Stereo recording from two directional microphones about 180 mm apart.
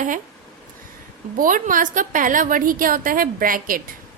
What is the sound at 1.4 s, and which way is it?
A woman's voice, 50° right (ahead or behind).